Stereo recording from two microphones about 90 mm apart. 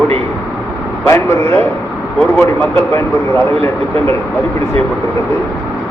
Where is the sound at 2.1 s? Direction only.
15° left (ahead or behind).